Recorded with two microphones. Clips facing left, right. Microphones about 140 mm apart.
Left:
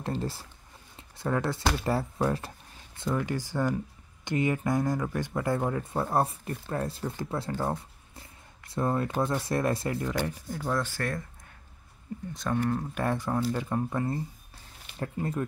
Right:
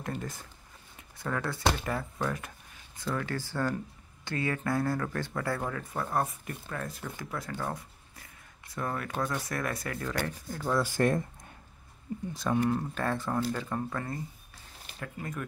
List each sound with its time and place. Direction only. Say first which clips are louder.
0.0 s speech: left 4 dB; 30° left (ahead or behind)
3.0 s speech: left 3 dB; 15° left (ahead or behind)
10.6 s speech: right 1 dB; centre (ahead or behind)
10.9 s speech: right 6 dB; 20° right (ahead or behind)
12.4 s speech: right 1 dB; 5° right (ahead or behind)
12.9 s speech: left 2 dB; 15° left (ahead or behind); by 15.4 s 30° left (ahead or behind)